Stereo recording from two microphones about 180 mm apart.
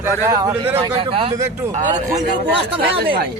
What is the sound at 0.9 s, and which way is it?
Speech, 35° right (ahead or behind).